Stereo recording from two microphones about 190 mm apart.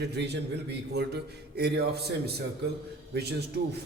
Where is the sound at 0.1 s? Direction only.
60° right (ahead or behind).